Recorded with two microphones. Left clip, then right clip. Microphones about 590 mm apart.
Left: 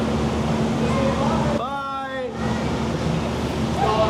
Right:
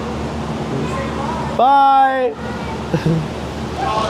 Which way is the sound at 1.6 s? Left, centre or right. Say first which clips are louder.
Right 16 dB; right.